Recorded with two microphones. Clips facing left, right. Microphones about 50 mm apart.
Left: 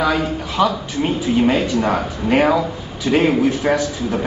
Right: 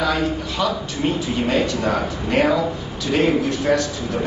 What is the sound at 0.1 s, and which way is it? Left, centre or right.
A man's voice, centre.